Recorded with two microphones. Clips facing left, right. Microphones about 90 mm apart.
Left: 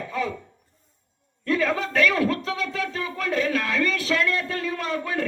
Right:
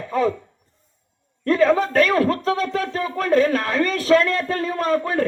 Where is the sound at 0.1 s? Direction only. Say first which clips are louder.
Right 9 dB; 40° right (ahead or behind).